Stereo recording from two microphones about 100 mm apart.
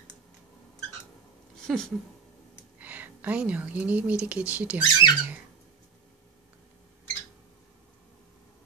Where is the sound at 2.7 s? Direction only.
15° right (ahead or behind).